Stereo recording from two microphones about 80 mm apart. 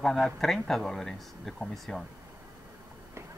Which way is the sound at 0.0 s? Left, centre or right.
Centre.